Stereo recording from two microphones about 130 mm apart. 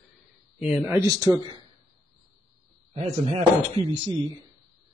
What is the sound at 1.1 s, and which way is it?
Speech, 30° right (ahead or behind).